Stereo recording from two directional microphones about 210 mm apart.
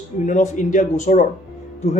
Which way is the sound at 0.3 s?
35° left (ahead or behind).